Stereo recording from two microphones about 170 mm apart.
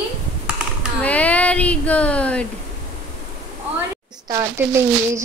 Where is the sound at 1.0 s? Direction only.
10° left (ahead or behind).